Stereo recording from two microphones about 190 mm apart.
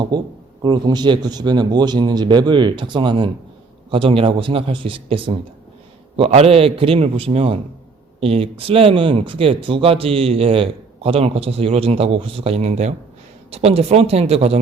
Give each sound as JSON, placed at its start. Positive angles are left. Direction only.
{"t": 0.1, "sound": "speech", "side_deg": -20}